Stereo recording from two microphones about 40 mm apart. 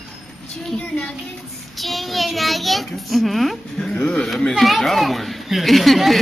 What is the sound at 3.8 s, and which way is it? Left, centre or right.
Speech, left.